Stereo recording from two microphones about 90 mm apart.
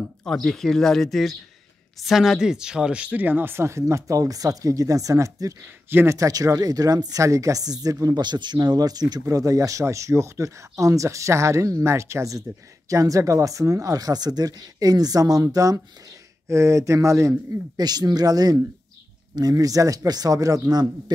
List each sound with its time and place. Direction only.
0.2 s speech: 10° left (ahead or behind); by 5.6 s 35° right (ahead or behind)
5.9 s speech: 25° right (ahead or behind)
6.1 s speech: 40° right (ahead or behind)
8.2 s speech: 55° right (ahead or behind); by 17.4 s 35° right (ahead or behind)
17.7 s speech: 50° right (ahead or behind)